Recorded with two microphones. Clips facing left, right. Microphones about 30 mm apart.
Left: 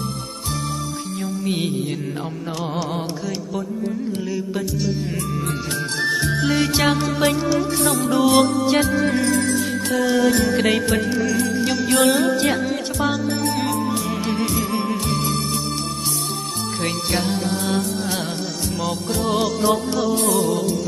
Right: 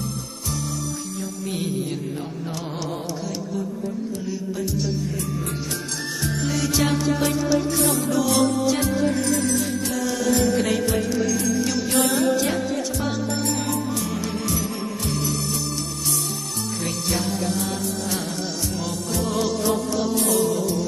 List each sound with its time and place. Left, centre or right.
1.4 s music: left
4.3 s music: centre
6.0 s music: left
7.8 s music: left
8.2 s music: left
13.5 s music: left
16.8 s music: left